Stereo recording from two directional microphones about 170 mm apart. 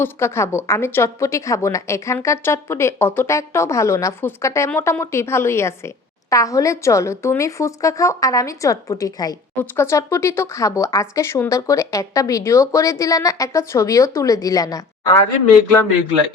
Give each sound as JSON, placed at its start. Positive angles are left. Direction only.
{"t": 0.0, "sound": "a woman's voice", "side_deg": 15}